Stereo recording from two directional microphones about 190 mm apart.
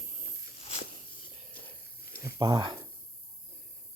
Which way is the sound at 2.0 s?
55° left (ahead or behind).